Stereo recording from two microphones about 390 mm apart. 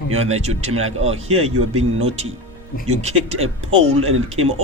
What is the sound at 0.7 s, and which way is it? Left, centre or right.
Speech, right.